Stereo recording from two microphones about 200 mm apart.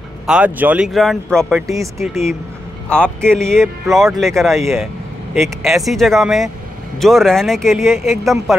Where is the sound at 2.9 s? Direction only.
5° left (ahead or behind).